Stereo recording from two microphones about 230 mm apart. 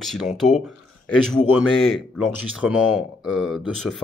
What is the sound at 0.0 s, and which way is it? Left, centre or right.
Speech, centre.